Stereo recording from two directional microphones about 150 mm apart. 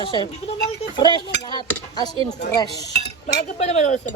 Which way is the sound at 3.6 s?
50° left (ahead or behind).